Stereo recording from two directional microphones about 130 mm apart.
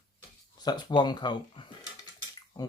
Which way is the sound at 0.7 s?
35° left (ahead or behind).